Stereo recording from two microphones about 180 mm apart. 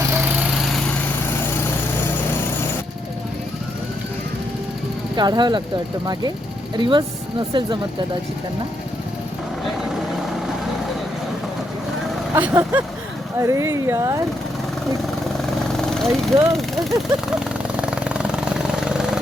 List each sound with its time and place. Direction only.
0.3 s lawn mower: centre (ahead or behind)
5.1 s speech: 25° right (ahead or behind)
6.7 s speech: 25° right (ahead or behind)
12.3 s speech: 10° right (ahead or behind)
15.8 s speech: centre (ahead or behind)
17.7 s vehicle: 5° right (ahead or behind)